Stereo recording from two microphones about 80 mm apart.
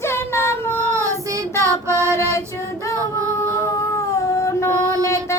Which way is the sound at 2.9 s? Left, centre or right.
Right.